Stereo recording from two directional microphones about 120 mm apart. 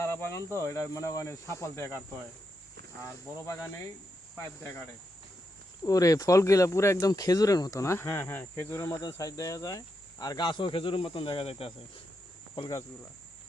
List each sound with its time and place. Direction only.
0.0 s speech: 20° left (ahead or behind)
3.0 s speech: 25° left (ahead or behind)
5.8 s speech: 30° left (ahead or behind); by 11.7 s 50° left (ahead or behind)